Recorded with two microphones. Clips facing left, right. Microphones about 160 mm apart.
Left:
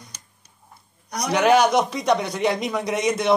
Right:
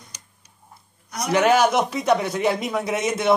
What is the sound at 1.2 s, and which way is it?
A man's voice, 5° right (ahead or behind).